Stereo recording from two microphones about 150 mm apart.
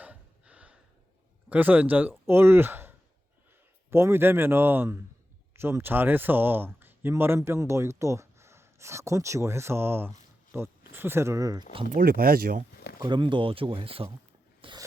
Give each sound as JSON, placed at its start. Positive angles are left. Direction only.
{"t": 0.0, "sound": "gasp", "side_deg": -10}
{"t": 1.5, "sound": "speech", "side_deg": -10}
{"t": 11.9, "sound": "speech", "side_deg": -75}
{"t": 13.0, "sound": "speech", "side_deg": -30}
{"t": 14.6, "sound": "a sound", "side_deg": -35}